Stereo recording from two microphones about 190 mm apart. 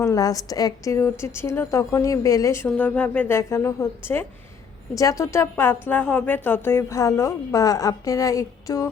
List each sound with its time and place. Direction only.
0.0 s speech: 15° left (ahead or behind)